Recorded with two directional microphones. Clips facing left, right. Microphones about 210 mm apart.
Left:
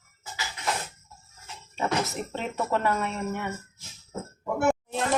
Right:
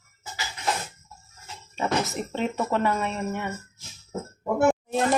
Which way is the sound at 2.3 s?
Centre (ahead or behind).